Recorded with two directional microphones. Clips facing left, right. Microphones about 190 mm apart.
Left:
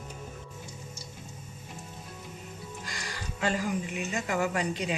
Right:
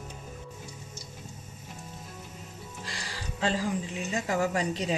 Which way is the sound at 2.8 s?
30° right (ahead or behind).